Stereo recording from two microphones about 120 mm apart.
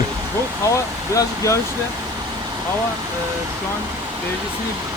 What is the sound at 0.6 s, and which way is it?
Speech, 25° left (ahead or behind).